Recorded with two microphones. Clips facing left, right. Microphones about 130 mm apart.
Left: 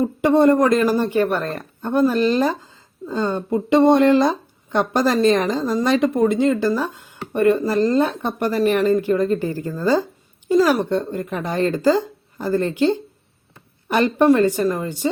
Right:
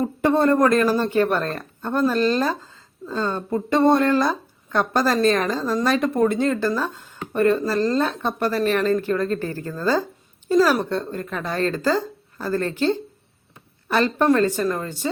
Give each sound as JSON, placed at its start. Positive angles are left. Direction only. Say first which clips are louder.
{"t": 0.0, "sound": "speech", "louder": "left 4 dB", "side_deg": 15}